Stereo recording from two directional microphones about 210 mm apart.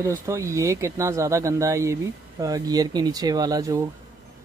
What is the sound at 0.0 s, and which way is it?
Speech, 15° right (ahead or behind).